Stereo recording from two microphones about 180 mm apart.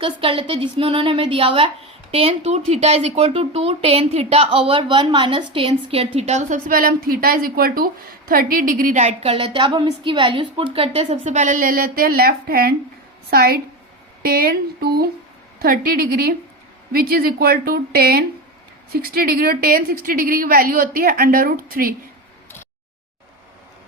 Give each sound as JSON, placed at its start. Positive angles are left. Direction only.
{"t": 0.0, "sound": "a woman's voice", "side_deg": -30}